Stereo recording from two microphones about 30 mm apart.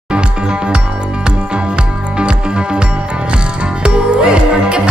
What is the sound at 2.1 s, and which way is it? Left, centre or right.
Music, right.